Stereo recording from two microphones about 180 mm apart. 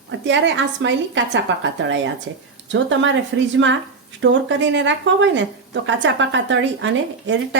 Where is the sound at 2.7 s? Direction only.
90° right.